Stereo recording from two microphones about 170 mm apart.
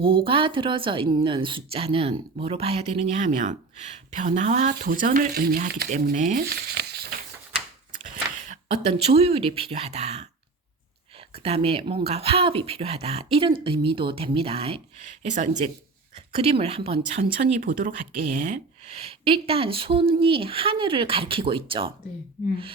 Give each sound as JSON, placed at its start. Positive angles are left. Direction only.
{"t": 0.0, "sound": "a woman's voice", "side_deg": -30}
{"t": 4.7, "sound": "speech", "side_deg": -60}
{"t": 5.9, "sound": "speech", "side_deg": -50}
{"t": 8.1, "sound": "speech", "side_deg": -45}
{"t": 11.4, "sound": "a woman's voice", "side_deg": -35}
{"t": 17.3, "sound": "speech", "side_deg": -55}
{"t": 19.2, "sound": "a woman's voice", "side_deg": -35}